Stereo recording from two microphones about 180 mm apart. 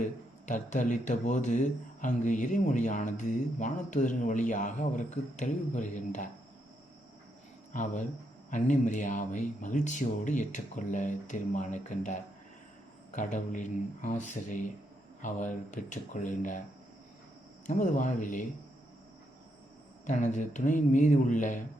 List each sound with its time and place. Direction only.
0.4 s speech: 45° left (ahead or behind)
7.7 s speech: 45° left (ahead or behind)
17.7 s speech: 45° left (ahead or behind)
20.1 s speech: 45° left (ahead or behind)